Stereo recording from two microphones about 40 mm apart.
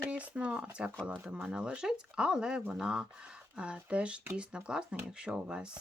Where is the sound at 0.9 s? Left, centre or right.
Right.